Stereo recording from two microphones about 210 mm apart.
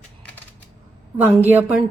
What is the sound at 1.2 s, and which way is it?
Speech, 10° right (ahead or behind).